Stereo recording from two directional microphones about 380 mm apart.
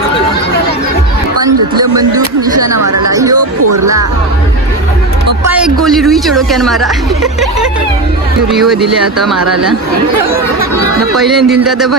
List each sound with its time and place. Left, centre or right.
2.7 s chatter: right
3.1 s a sound: centre
5.5 s speech: centre
8.5 s speech: centre
11.2 s speech: centre